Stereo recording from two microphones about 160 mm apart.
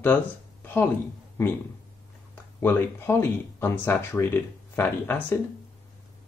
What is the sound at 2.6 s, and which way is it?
Speech, 15° left (ahead or behind).